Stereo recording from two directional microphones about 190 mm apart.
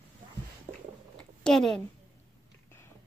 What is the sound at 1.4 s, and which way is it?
Speech, centre (ahead or behind).